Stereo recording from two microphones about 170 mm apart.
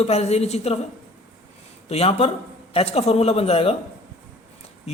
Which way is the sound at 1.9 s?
35° left (ahead or behind).